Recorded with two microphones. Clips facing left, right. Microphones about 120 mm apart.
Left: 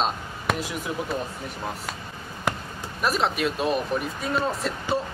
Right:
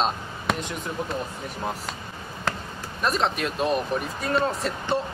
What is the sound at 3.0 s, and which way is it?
Speech, 5° left (ahead or behind).